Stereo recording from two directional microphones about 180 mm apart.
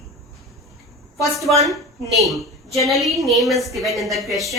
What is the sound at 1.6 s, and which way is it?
A woman's voice, centre (ahead or behind).